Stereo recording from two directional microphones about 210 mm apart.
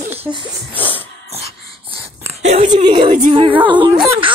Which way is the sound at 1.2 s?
30° right (ahead or behind).